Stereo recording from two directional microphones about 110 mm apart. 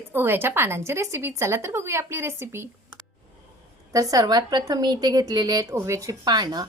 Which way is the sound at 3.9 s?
35° right (ahead or behind).